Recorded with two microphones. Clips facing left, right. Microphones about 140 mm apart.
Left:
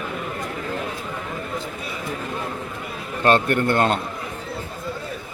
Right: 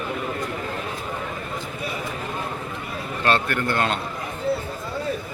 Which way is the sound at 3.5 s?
25° left (ahead or behind).